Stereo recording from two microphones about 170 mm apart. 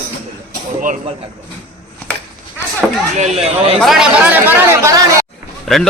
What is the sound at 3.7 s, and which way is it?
Speech, centre (ahead or behind).